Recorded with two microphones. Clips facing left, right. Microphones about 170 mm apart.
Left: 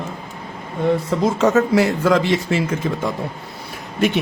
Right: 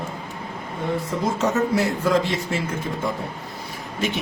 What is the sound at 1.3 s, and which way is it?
Speech, 90° left.